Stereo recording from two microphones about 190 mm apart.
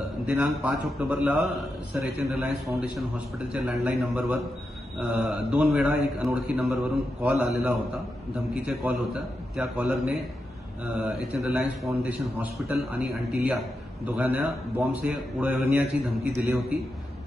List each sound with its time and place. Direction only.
0.3 s a man's voice: 5° right (ahead or behind)